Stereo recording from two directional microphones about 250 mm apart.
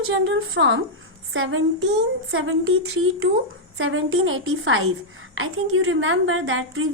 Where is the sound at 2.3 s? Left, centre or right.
Right.